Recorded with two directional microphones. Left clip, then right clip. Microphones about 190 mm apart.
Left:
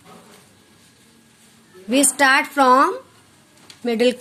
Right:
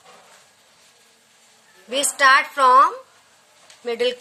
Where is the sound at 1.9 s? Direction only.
20° left (ahead or behind).